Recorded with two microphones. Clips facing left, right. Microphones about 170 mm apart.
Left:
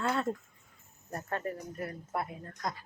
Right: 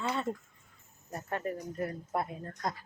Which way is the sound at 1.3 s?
15° right (ahead or behind).